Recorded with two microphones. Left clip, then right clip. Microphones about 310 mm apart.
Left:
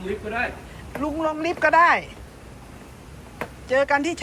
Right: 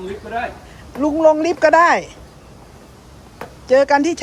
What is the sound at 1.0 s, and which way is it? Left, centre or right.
Speech, right.